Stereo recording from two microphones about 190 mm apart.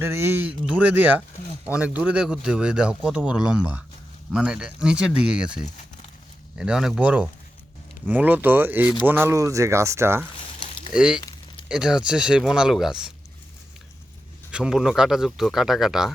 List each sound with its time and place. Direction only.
0.0 s speech: 15° right (ahead or behind)
11.2 s a sound: 20° left (ahead or behind)
11.7 s speech: 5° right (ahead or behind)
14.5 s speech: 5° right (ahead or behind)